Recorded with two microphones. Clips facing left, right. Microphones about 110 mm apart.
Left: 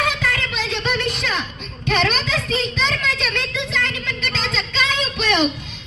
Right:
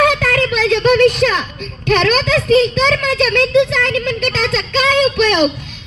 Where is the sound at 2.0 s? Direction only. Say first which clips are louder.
Right 7 dB; 70° right (ahead or behind).